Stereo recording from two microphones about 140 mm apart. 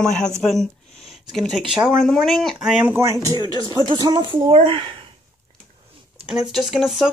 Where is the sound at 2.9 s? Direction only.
20° right (ahead or behind).